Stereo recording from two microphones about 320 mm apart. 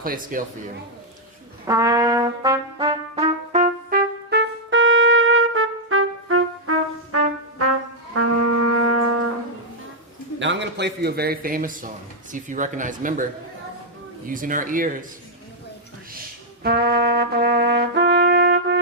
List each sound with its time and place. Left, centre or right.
0.0 s speech: right
1.6 s trumpet: centre; by 7.2 s right
8.1 s music: right
10.4 s a man's voice: right
14.3 s speech: right
16.6 s trumpet: right